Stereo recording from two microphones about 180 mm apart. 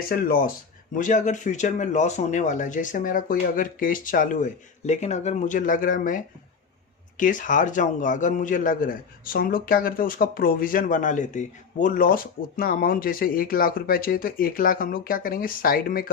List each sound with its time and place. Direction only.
0.1 s a man's voice: 55° left (ahead or behind)
7.2 s a man's voice: 45° left (ahead or behind)